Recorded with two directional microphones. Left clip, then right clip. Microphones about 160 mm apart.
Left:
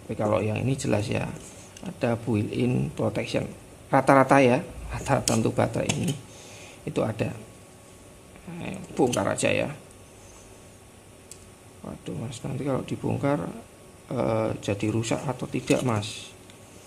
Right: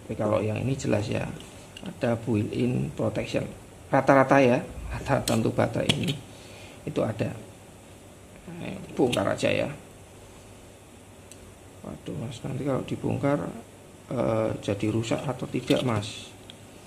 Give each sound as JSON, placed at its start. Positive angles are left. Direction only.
{"t": 0.1, "sound": "speech", "side_deg": 25}
{"t": 8.5, "sound": "speech", "side_deg": 25}
{"t": 11.8, "sound": "speech", "side_deg": 20}